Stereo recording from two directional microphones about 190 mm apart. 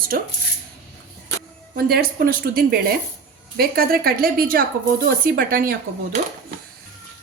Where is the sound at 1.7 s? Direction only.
55° right (ahead or behind).